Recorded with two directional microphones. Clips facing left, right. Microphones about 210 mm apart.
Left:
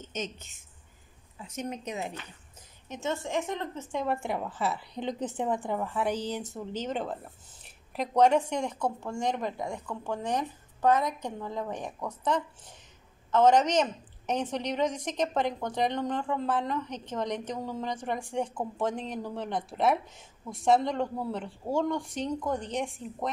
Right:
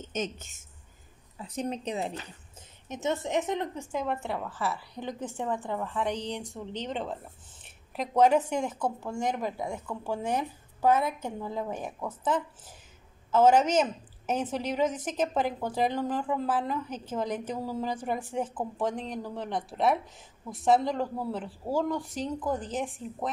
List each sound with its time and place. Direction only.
0.1 s a woman's voice: 50° right (ahead or behind)
1.4 s speech: 35° right (ahead or behind)
2.9 s a woman's voice: 20° right (ahead or behind)
4.0 s a woman's voice: 10° left (ahead or behind)